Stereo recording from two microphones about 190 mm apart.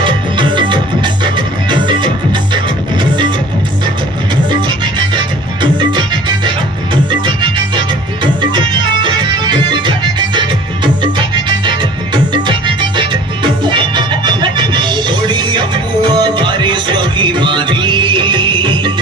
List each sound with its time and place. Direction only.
0.0 s music: 25° right (ahead or behind)
5.9 s music: 25° right (ahead or behind)
8.2 s music: 25° right (ahead or behind)